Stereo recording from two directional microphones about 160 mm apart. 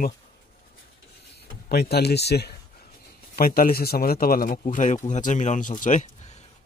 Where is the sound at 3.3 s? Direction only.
65° left (ahead or behind).